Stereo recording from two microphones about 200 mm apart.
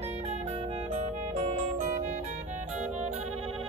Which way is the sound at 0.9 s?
35° right (ahead or behind).